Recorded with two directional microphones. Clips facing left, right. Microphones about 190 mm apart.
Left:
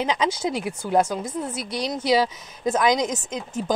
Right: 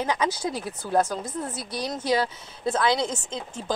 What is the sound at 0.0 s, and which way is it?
A woman's voice, 20° left (ahead or behind).